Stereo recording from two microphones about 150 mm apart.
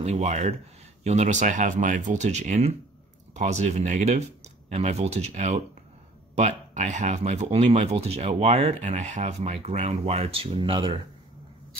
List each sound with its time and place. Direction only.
0.0 s speech: 50° right (ahead or behind)